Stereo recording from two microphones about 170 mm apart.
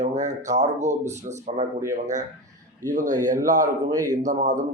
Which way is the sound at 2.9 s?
45° right (ahead or behind).